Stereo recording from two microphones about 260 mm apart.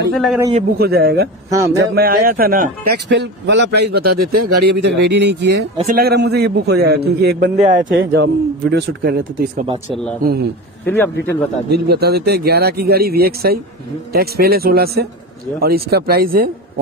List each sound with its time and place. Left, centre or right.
0.1 s a man's voice: centre
0.4 s a man's voice: right
0.7 s a man's voice: right
1.5 s speech: centre
2.0 s a man's voice: right
10.9 s speech: centre
11.7 s a man's voice: right